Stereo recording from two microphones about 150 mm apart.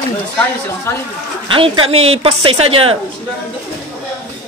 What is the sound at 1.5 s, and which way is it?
A woman's voice, 35° right (ahead or behind).